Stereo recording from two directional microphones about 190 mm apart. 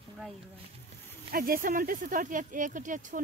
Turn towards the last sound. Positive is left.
turn(degrees=-45)  # may be behind; listen again after turning